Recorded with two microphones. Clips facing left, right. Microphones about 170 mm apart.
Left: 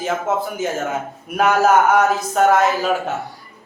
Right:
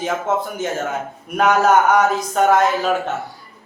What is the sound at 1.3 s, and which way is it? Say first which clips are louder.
A man's voice: even; 5° left (ahead or behind).